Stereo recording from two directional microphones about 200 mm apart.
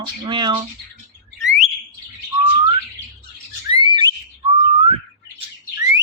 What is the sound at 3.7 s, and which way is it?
Whistling, 25° right (ahead or behind).